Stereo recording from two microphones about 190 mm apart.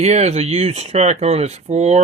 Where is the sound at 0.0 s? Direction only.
35° right (ahead or behind).